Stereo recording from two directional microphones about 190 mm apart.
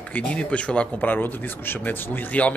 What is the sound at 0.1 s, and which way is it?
Speech, 5° left (ahead or behind).